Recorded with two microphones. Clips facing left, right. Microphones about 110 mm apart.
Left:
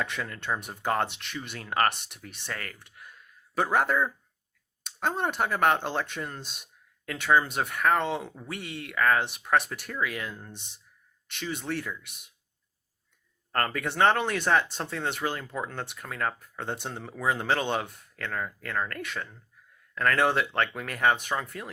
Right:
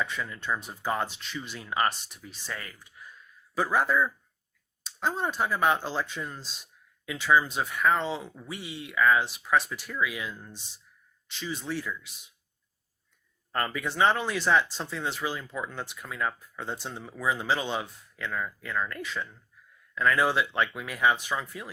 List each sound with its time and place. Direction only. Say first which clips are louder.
0.0 s speech: even; 75° left (ahead or behind)
13.5 s speech: left 2 dB; 60° left (ahead or behind)